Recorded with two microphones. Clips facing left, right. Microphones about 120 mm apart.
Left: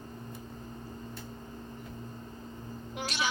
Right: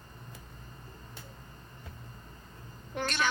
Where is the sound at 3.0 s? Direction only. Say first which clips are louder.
Right 3 dB; 10° left (ahead or behind).